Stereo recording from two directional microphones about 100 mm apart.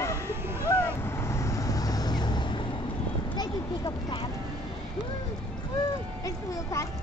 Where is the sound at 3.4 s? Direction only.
45° left (ahead or behind).